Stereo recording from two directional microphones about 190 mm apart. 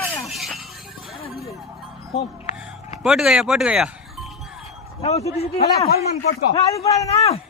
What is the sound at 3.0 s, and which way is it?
Speech, centre (ahead or behind).